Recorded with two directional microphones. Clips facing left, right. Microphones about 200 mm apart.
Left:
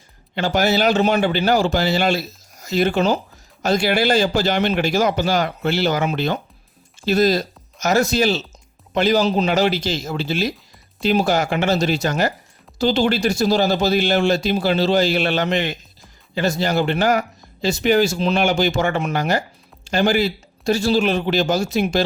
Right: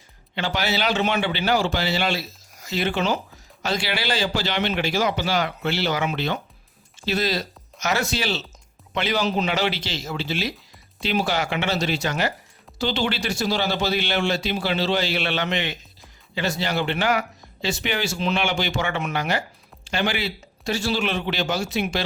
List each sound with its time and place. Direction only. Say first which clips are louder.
0.3 s speech: left 7 dB; 45° left (ahead or behind)